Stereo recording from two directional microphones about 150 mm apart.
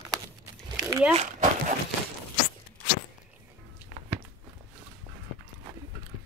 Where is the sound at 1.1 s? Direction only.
50° right (ahead or behind).